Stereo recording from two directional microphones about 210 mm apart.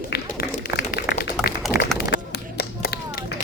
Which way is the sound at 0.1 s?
50° left (ahead or behind).